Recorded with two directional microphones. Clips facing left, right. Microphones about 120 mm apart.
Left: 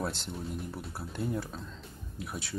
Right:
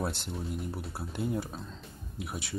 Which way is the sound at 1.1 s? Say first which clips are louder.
Right 1 dB; 15° right (ahead or behind).